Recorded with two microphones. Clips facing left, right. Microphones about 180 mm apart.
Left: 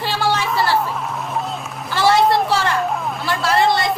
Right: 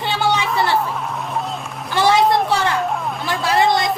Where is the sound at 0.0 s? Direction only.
20° right (ahead or behind).